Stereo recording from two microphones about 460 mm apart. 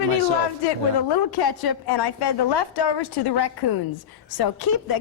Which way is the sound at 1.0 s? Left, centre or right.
Left.